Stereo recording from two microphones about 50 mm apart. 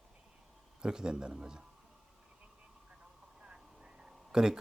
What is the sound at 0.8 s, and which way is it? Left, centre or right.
Speech, centre.